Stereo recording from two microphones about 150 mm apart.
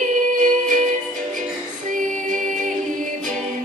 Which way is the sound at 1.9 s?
60° right (ahead or behind).